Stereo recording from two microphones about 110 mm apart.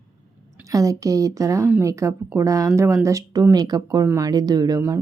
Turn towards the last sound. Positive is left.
turn(degrees=-25)  # may be behind; listen again after turning